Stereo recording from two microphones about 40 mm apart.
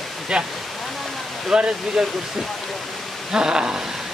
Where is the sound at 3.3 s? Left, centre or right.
Centre.